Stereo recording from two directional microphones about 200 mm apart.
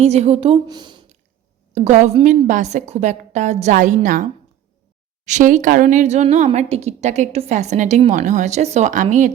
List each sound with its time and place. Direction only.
0.0 s a woman's voice: 30° right (ahead or behind)
1.7 s a woman's voice: 35° right (ahead or behind)